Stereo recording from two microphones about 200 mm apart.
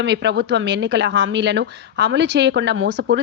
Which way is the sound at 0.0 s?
60° right (ahead or behind).